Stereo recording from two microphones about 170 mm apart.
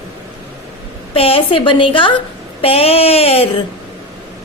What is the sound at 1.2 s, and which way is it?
A woman's voice, 35° left (ahead or behind).